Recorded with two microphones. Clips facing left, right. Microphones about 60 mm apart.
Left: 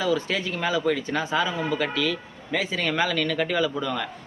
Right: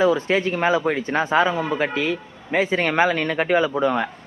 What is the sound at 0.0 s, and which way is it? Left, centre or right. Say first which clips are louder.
Speech: right 6 dB; right.